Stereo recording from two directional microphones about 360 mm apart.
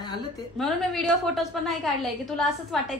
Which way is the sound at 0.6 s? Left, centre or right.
Centre.